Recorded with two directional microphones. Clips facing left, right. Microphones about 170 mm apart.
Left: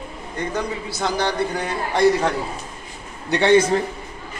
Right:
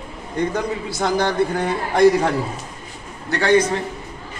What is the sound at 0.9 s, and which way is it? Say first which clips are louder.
Speech: right 3 dB; 50° right (ahead or behind).